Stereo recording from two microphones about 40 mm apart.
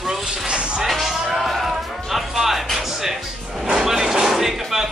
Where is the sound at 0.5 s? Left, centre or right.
Right.